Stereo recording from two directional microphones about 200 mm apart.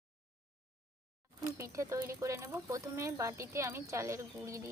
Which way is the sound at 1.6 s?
15° right (ahead or behind).